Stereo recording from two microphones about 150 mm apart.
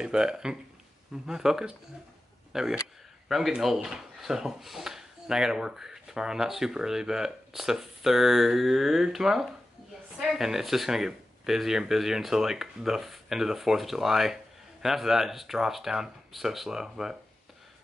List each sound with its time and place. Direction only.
0.0 s speech: 5° right (ahead or behind)